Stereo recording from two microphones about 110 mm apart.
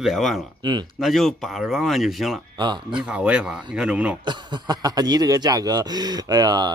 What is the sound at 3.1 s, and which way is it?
Speech, 10° right (ahead or behind).